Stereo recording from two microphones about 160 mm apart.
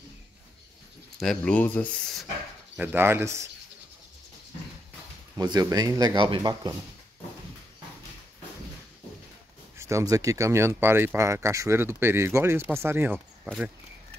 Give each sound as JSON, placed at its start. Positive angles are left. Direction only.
{"t": 1.2, "sound": "speech", "side_deg": 5}
{"t": 2.8, "sound": "speech", "side_deg": -10}
{"t": 5.4, "sound": "speech", "side_deg": -25}
{"t": 9.8, "sound": "speech", "side_deg": -20}